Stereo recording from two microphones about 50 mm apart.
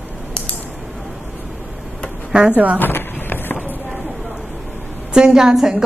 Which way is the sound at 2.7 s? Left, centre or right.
Left.